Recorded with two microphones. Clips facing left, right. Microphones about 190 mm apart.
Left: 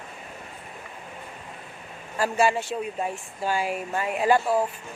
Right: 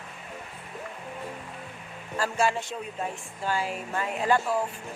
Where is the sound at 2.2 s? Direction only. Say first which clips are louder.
Left 4 dB; 10° left (ahead or behind).